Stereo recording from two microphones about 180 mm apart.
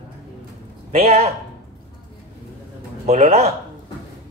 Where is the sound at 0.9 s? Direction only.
35° right (ahead or behind).